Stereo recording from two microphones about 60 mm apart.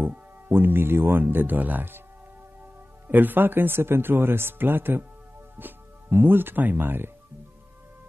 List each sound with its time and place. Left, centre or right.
0.0 s speech: right
3.1 s speech: right